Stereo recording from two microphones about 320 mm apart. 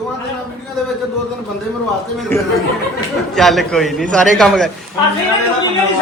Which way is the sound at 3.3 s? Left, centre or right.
Centre.